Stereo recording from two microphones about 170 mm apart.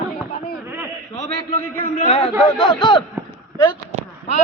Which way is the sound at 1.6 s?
60° right (ahead or behind).